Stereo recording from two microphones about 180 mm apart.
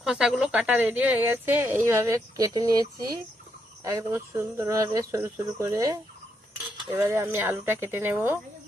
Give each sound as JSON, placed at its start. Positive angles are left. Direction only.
{"t": 0.0, "sound": "speech", "side_deg": -5}